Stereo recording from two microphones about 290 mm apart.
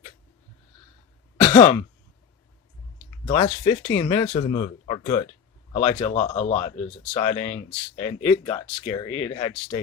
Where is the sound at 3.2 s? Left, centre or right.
Left.